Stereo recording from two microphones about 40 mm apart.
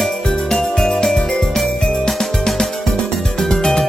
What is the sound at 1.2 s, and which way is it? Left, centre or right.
Jingle bell, centre.